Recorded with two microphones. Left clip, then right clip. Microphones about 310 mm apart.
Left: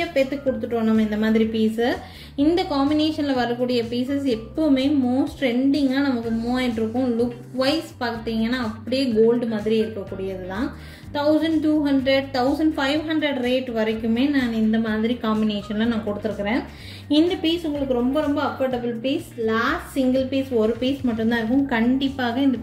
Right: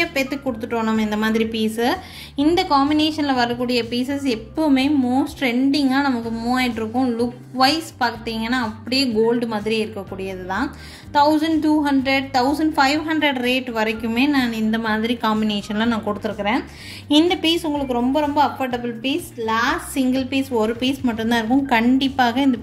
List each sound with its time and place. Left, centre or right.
0.1 s a woman's voice: right
7.5 s a woman's voice: right